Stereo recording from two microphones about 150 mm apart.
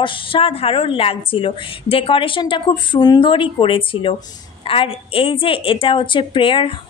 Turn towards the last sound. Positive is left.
turn(degrees=35)  # may be behind; listen again after turning